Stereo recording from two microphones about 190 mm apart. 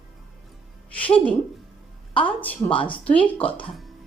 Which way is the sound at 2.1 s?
25° left (ahead or behind).